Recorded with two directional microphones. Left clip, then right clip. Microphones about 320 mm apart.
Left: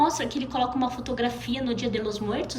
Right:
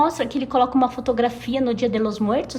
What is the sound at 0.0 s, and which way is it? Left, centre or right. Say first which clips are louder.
A woman's voice: right 4 dB; right.